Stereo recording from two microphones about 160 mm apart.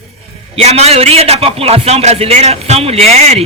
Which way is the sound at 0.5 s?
40° right (ahead or behind).